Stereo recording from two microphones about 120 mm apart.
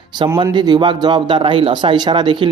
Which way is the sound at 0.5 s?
40° right (ahead or behind).